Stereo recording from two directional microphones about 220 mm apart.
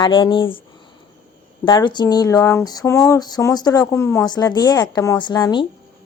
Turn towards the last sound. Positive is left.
turn(degrees=20)  # may be behind; listen again after turning